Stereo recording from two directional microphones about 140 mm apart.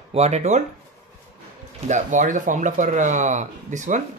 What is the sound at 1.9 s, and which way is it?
Speech, 60° right (ahead or behind).